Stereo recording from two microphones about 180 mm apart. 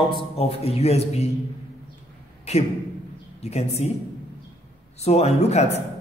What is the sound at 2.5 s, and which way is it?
A man's voice, 35° left (ahead or behind).